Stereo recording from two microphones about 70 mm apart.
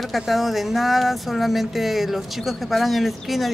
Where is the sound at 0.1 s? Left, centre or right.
Centre.